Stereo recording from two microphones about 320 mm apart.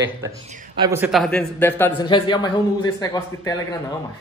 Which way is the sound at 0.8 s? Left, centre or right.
Centre.